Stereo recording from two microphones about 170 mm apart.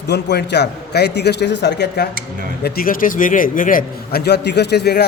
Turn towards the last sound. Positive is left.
turn(degrees=75)  # may be behind; listen again after turning